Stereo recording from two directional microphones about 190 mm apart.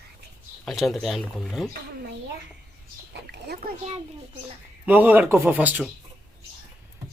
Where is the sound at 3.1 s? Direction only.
60° right (ahead or behind).